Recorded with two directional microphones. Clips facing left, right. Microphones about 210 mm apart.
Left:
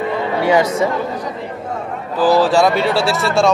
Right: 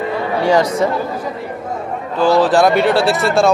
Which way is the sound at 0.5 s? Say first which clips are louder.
Right 1 dB; 5° left (ahead or behind).